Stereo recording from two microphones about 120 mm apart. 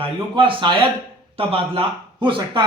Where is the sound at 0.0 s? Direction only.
45° right (ahead or behind).